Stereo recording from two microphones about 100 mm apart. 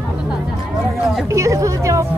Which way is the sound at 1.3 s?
30° right (ahead or behind).